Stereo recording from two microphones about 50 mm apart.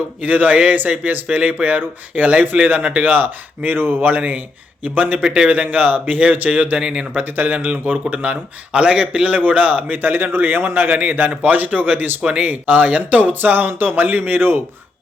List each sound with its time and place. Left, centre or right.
0.2 s speech: right
5.2 s a man's voice: centre
5.5 s speech: right
6.8 s a man's voice: right
7.3 s a man's voice: right